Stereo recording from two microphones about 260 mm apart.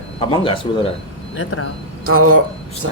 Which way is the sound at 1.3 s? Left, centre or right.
Left.